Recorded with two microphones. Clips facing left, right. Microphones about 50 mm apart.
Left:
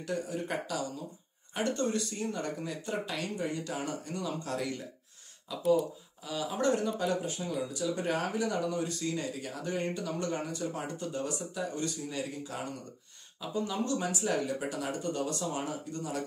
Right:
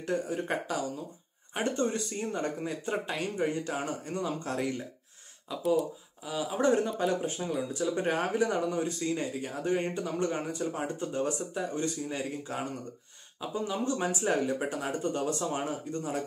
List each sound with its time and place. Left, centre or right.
0.0 s speech: right
6.2 s speech: centre; by 12.5 s right
13.7 s speech: right